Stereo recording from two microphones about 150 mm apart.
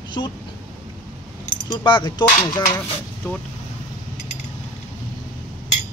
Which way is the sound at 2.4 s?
25° left (ahead or behind).